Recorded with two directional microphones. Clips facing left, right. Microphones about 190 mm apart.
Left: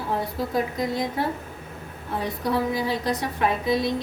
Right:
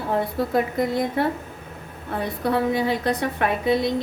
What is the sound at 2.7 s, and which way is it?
A woman's voice, 60° right (ahead or behind).